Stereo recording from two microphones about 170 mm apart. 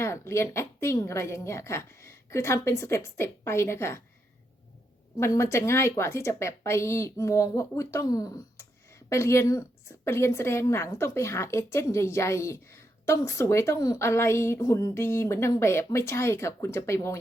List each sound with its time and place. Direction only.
0.0 s a woman's voice: 15° left (ahead or behind)
5.2 s a woman's voice: 15° left (ahead or behind)